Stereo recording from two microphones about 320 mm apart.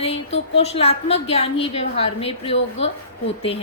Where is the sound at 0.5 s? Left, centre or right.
Centre.